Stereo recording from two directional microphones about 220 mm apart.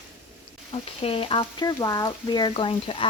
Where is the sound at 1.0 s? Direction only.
25° left (ahead or behind).